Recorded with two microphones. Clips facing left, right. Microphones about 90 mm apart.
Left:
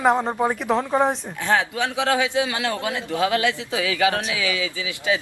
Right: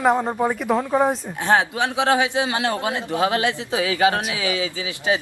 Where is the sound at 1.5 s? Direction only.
20° right (ahead or behind).